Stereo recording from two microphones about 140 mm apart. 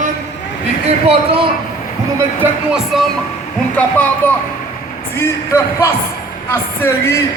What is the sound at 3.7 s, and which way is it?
Speech, 10° left (ahead or behind).